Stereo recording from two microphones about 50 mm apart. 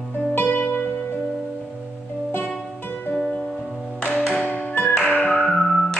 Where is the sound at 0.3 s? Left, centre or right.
Left.